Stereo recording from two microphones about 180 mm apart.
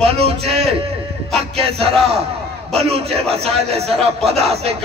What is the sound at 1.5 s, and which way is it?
A man's voice, 35° right (ahead or behind).